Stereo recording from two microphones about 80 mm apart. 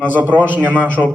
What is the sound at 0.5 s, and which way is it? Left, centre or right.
Speech, right.